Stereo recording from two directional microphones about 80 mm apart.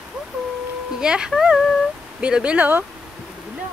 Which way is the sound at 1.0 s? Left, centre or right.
Centre.